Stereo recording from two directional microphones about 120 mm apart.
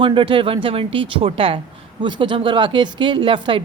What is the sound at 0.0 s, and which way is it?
Speech, 45° right (ahead or behind).